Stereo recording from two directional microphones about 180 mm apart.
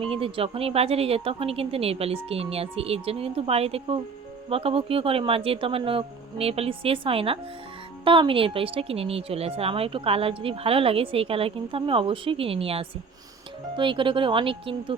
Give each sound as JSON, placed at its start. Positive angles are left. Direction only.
{"t": 0.0, "sound": "speech", "side_deg": -30}